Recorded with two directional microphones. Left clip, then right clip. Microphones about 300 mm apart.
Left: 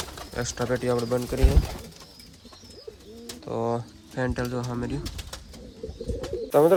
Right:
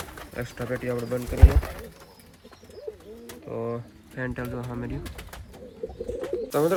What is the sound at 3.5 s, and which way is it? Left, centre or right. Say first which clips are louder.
Speech: left 4 dB; centre.